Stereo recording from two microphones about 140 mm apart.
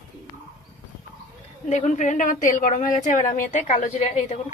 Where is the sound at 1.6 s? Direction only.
55° left (ahead or behind).